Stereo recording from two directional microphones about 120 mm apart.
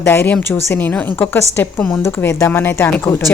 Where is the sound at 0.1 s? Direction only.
15° left (ahead or behind).